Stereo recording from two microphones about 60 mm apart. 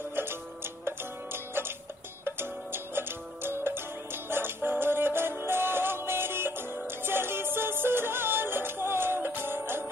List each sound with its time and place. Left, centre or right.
0.1 s music: right